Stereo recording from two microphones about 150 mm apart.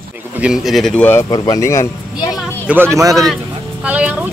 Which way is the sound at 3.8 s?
10° right (ahead or behind).